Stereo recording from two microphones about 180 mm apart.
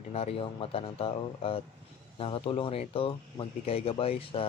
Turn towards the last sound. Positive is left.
turn(degrees=30)  # may be behind; listen again after turning